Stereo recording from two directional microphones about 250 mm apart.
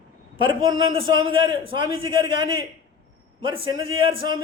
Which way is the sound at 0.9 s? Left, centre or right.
Centre.